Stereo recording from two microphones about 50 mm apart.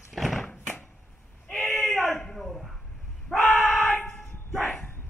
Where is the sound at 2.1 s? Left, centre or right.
Centre.